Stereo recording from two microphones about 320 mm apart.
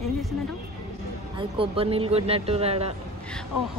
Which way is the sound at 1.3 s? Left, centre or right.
Centre.